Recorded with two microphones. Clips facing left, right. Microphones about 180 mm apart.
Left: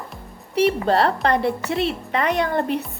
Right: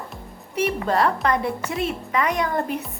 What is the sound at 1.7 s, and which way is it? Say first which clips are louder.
Speech: left 2 dB; 75° left (ahead or behind).